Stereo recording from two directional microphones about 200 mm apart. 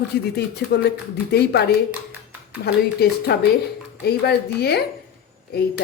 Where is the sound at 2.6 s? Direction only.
50° left (ahead or behind).